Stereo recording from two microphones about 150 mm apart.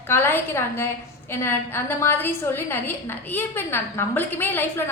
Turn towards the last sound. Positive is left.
turn(degrees=15)  # may be behind; listen again after turning